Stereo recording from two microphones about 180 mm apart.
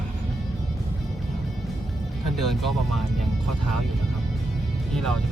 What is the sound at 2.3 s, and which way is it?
Speech, centre (ahead or behind).